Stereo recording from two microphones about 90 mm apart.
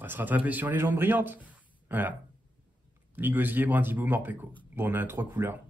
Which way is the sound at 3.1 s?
20° right (ahead or behind).